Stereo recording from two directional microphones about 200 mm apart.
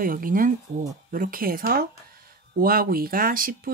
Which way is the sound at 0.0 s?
45° right (ahead or behind).